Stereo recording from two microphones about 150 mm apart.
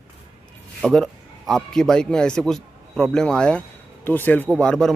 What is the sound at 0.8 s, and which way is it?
A man's voice, 5° left (ahead or behind).